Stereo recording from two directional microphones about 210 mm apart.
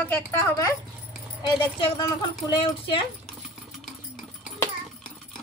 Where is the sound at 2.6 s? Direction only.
25° left (ahead or behind).